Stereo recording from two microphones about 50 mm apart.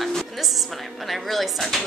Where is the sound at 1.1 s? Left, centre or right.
Centre.